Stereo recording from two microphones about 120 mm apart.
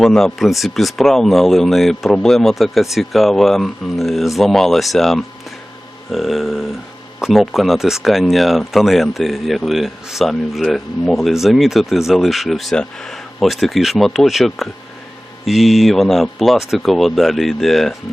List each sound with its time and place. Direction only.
0.0 s speech: 5° left (ahead or behind)